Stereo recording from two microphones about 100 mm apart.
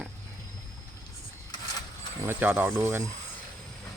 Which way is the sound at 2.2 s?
20° right (ahead or behind).